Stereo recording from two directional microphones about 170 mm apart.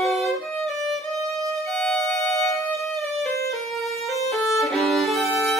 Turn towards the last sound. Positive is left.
turn(degrees=0)  # may be behind; listen again after turning